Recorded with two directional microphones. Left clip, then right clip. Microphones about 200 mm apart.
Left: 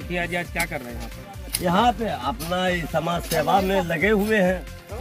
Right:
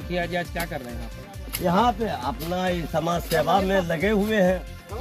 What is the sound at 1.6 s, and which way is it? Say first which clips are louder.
Speech: left 1 dB; 5° left (ahead or behind).